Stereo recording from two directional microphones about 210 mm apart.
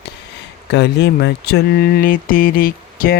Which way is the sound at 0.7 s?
55° left (ahead or behind).